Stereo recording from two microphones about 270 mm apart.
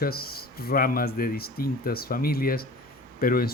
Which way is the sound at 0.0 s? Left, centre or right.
Left.